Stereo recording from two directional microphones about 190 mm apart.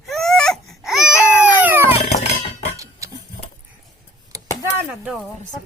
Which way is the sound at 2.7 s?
15° right (ahead or behind).